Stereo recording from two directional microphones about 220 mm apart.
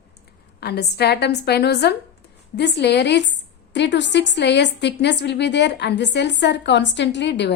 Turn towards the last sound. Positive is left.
turn(degrees=50)  # may be behind; listen again after turning